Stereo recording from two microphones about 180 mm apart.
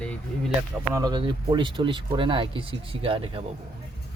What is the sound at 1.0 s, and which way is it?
Speech, 25° right (ahead or behind).